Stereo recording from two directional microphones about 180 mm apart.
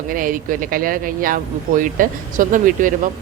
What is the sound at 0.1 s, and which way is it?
Speech, 50° right (ahead or behind).